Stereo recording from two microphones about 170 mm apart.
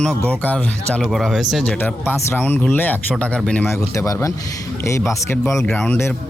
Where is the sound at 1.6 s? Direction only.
10° left (ahead or behind).